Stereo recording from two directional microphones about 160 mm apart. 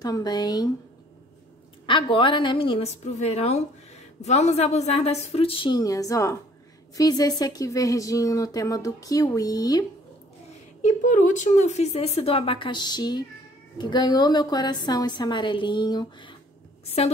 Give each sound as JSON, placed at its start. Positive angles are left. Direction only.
{"t": 0.0, "sound": "speech", "side_deg": 25}
{"t": 1.9, "sound": "a woman's voice", "side_deg": 30}
{"t": 10.8, "sound": "a woman's voice", "side_deg": 50}